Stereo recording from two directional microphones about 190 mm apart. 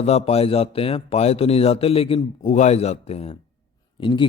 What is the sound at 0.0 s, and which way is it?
A man's voice, 35° left (ahead or behind).